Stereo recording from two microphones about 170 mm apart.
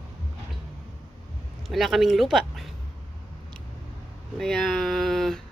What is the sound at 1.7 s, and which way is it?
Speech, centre (ahead or behind).